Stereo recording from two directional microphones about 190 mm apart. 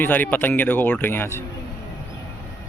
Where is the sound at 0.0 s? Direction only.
10° left (ahead or behind).